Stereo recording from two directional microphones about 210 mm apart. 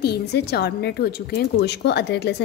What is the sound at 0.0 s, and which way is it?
Speech, 50° left (ahead or behind).